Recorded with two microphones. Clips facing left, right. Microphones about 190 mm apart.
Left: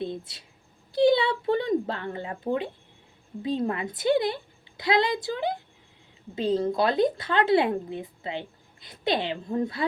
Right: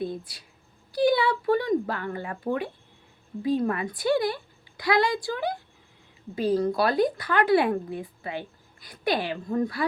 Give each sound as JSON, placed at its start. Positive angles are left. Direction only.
{"t": 0.0, "sound": "speech", "side_deg": 25}